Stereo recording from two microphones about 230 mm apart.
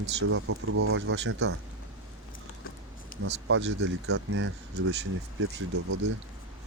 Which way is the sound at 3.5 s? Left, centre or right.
Right.